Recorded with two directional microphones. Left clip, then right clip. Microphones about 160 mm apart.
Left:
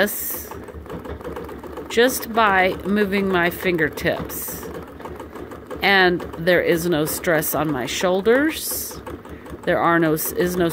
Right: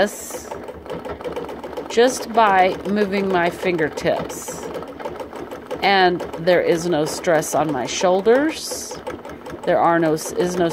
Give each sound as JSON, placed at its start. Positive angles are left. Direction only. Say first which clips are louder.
{"t": 1.9, "sound": "speech", "louder": "right 1 dB", "side_deg": 20}
{"t": 5.8, "sound": "speech", "louder": "even", "side_deg": 15}